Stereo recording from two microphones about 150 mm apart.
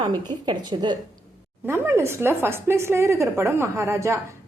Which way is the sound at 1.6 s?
15° right (ahead or behind).